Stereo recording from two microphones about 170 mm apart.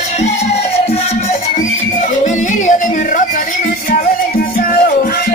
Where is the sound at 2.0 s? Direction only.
45° left (ahead or behind).